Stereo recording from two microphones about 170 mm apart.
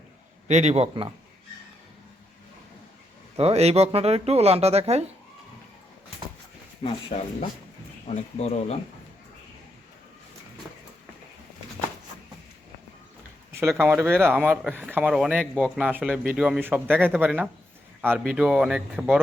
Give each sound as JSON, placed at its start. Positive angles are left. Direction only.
{"t": 0.4, "sound": "speech", "side_deg": -40}
{"t": 3.3, "sound": "speech", "side_deg": -35}
{"t": 7.1, "sound": "speech", "side_deg": 40}
{"t": 13.5, "sound": "a sound", "side_deg": -15}
{"t": 13.7, "sound": "speech", "side_deg": -10}